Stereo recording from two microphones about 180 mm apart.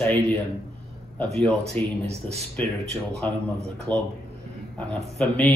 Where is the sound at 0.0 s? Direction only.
10° left (ahead or behind).